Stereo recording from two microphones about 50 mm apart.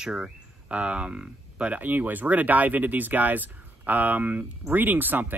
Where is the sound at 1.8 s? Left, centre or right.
Right.